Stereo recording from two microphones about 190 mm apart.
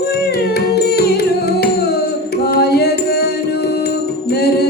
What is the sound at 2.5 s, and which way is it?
Music, 55° left (ahead or behind).